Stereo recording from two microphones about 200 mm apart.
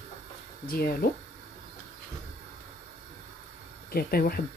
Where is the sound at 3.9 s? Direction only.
50° left (ahead or behind).